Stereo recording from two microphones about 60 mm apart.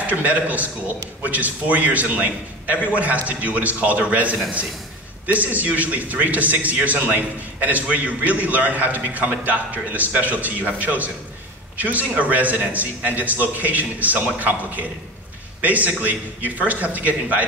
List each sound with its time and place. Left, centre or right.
0.0 s a man's voice: right